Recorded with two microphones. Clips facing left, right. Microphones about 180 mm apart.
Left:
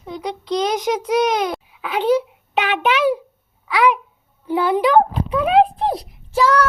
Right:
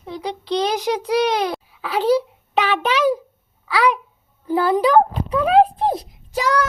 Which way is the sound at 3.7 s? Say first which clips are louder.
Left 2 dB; 35° right (ahead or behind).